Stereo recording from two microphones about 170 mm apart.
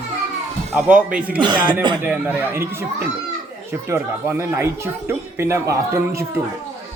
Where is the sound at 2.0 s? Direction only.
10° right (ahead or behind).